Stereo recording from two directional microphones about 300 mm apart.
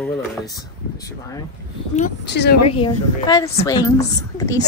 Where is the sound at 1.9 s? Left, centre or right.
Left.